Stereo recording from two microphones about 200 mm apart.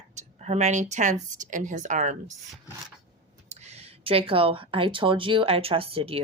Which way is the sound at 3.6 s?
30° right (ahead or behind).